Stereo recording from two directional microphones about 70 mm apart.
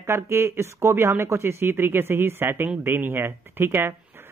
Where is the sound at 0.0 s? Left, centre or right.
Right.